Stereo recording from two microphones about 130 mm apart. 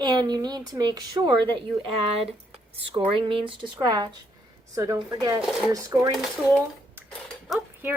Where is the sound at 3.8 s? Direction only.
30° right (ahead or behind).